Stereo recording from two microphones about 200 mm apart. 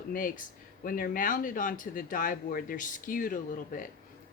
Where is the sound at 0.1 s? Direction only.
45° left (ahead or behind).